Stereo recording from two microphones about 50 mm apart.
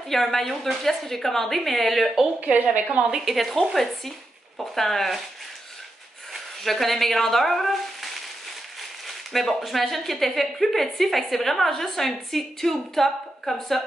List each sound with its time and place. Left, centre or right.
0.1 s a woman's voice: centre
2.4 s speech: right
3.1 s a woman's voice: centre
6.3 s speech: centre
9.3 s a woman's voice: centre